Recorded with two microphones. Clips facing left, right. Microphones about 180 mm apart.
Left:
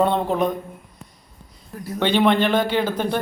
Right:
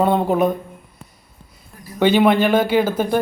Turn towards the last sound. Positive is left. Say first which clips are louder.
# right 4 dB
turn(degrees=-5)  # may be behind; listen again after turning